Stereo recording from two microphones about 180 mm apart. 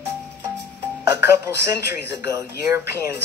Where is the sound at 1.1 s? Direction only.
15° right (ahead or behind).